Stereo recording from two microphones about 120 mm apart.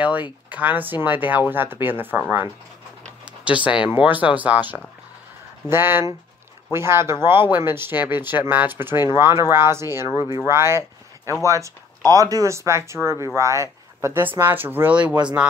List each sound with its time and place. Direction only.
0.5 s speech: 15° right (ahead or behind)